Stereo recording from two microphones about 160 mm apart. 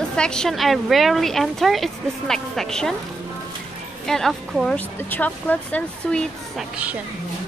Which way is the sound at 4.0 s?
Centre (ahead or behind).